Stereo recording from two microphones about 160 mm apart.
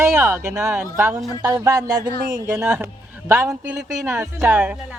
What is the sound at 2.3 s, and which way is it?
Speech, 15° right (ahead or behind).